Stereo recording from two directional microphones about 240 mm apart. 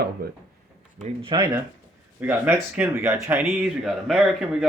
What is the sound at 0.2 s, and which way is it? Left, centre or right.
Speech, right.